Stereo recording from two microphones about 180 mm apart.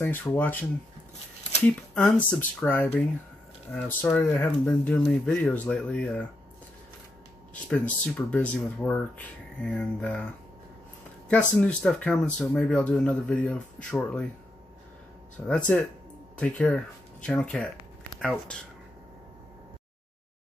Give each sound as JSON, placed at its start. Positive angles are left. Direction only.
{"t": 0.0, "sound": "speech", "side_deg": 10}
{"t": 7.6, "sound": "speech", "side_deg": 5}
{"t": 11.2, "sound": "speech", "side_deg": 10}
{"t": 15.4, "sound": "speech", "side_deg": 5}